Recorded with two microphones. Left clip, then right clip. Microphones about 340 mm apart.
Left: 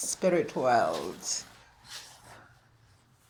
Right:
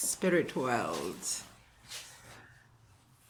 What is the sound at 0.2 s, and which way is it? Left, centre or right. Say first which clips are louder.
Speech: left 3 dB; centre.